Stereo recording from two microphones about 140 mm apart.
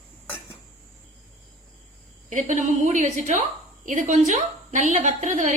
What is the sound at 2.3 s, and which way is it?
A woman's voice, 60° right (ahead or behind).